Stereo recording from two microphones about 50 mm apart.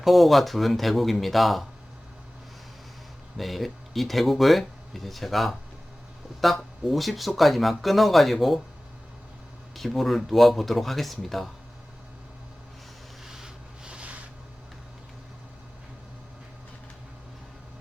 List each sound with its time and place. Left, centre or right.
0.0 s speech: centre
3.3 s speech: centre
9.7 s speech: centre
13.2 s rub: centre